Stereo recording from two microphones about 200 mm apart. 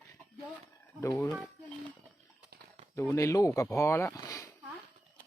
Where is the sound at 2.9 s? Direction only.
15° left (ahead or behind).